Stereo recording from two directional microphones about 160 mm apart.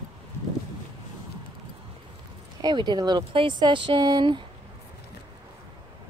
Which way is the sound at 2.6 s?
25° right (ahead or behind).